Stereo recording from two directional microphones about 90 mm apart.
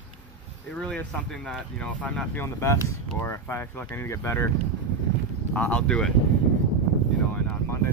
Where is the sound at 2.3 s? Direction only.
30° left (ahead or behind).